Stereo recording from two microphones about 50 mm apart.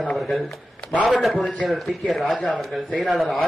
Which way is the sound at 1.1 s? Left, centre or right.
Centre.